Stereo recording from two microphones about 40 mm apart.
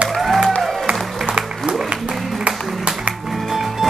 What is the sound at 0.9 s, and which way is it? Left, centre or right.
Music, right.